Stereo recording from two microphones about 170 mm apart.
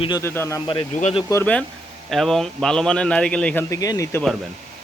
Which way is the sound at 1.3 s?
10° left (ahead or behind).